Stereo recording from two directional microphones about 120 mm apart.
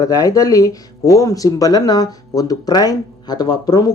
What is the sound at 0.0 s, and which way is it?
Speech, 30° left (ahead or behind).